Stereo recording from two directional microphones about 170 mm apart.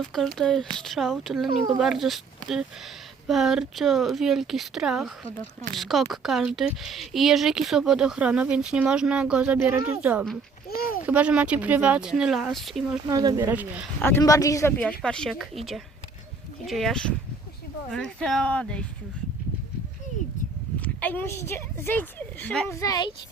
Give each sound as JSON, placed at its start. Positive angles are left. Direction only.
{"t": 0.0, "sound": "speech", "side_deg": 0}
{"t": 10.8, "sound": "a sound", "side_deg": 60}
{"t": 11.0, "sound": "speech", "side_deg": -5}
{"t": 13.1, "sound": "speech", "side_deg": -20}
{"t": 14.0, "sound": "speech", "side_deg": 15}
{"t": 14.8, "sound": "speech", "side_deg": 5}
{"t": 20.8, "sound": "a woman's voice", "side_deg": 10}
{"t": 22.7, "sound": "speech", "side_deg": 20}